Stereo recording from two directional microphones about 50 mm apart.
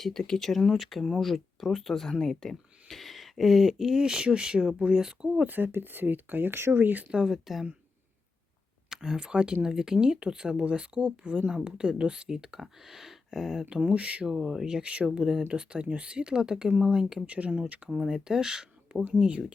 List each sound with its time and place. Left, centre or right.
0.0 s speech: centre
5.3 s speech: right
7.1 s speech: centre
8.9 s speech: centre
13.7 s speech: right
17.2 s speech: right
17.9 s speech: centre